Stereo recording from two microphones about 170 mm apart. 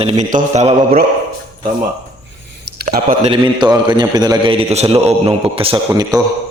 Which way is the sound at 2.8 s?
50° right (ahead or behind).